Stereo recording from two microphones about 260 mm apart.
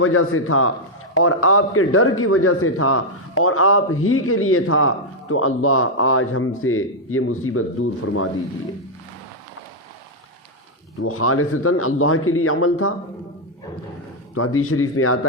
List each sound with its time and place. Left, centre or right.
0.0 s a man's voice: left
11.0 s a man's voice: left
14.3 s a man's voice: left